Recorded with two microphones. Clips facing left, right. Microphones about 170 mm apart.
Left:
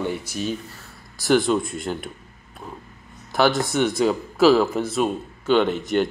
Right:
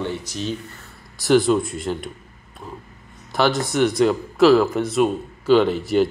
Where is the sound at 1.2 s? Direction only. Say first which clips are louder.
Right 3 dB; centre (ahead or behind).